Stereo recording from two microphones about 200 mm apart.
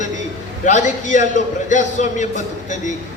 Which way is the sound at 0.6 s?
35° left (ahead or behind).